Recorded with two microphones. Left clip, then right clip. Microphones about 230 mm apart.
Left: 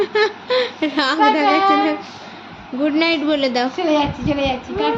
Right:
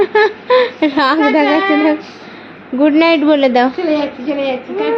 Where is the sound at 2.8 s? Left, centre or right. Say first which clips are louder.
Right 7 dB; centre.